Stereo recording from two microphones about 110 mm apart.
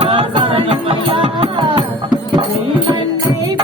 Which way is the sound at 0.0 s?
55° right (ahead or behind).